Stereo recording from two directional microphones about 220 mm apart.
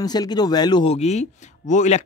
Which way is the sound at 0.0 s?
20° left (ahead or behind).